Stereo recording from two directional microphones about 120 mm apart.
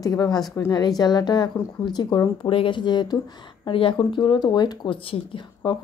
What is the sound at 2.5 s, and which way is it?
Speech, 45° left (ahead or behind).